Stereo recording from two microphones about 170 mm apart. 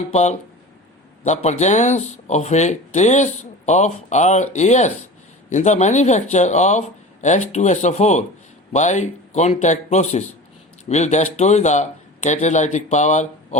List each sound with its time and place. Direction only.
0.1 s speech: 40° left (ahead or behind)